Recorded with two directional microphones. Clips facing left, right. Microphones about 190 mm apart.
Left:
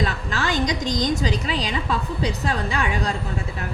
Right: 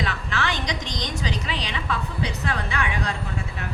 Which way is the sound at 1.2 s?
40° left (ahead or behind).